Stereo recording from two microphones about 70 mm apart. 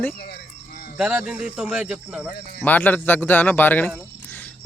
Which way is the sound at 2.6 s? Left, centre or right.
Left.